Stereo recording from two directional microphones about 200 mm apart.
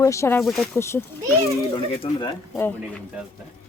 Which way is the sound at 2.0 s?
15° left (ahead or behind).